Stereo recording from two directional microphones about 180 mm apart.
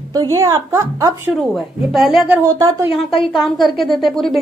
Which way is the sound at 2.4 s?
20° right (ahead or behind).